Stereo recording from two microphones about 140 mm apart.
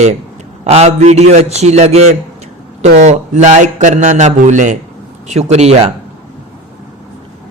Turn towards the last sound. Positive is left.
turn(degrees=-50)  # may be behind; listen again after turning